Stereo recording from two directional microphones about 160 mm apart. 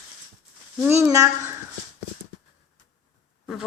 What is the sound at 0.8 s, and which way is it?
Speech, 15° right (ahead or behind).